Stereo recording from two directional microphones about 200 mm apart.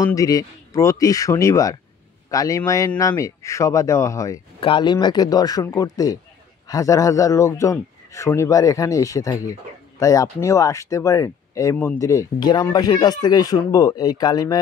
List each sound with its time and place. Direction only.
0.0 s a man's voice: 15° left (ahead or behind)
4.6 s a man's voice: 25° left (ahead or behind)